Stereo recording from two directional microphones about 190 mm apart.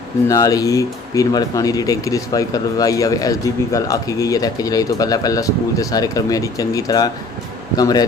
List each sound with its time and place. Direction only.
0.3 s speech: 20° left (ahead or behind)